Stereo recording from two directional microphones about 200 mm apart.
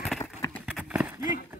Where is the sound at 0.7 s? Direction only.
5° right (ahead or behind).